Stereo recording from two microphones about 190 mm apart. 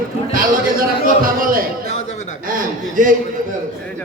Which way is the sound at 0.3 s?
50° right (ahead or behind).